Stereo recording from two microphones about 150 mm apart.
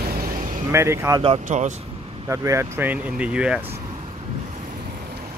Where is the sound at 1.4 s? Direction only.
55° right (ahead or behind).